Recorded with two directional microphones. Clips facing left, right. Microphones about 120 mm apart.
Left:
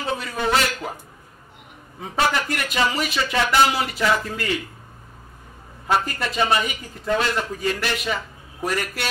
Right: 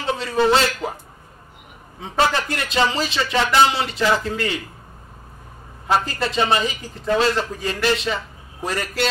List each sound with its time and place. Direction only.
0.0 s a man's voice: 30° right (ahead or behind)
2.0 s a man's voice: 30° right (ahead or behind)
5.9 s a man's voice: 30° right (ahead or behind)